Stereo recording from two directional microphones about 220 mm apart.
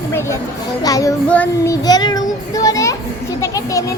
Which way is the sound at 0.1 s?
10° left (ahead or behind).